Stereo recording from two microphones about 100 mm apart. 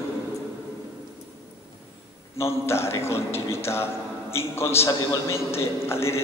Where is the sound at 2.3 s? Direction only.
25° left (ahead or behind).